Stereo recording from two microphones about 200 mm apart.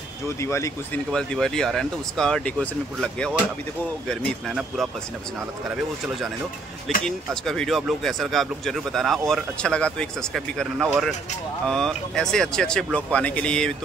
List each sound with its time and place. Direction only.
0.4 s speech: 15° left (ahead or behind); by 4.8 s centre (ahead or behind)
7.1 s speech: centre (ahead or behind)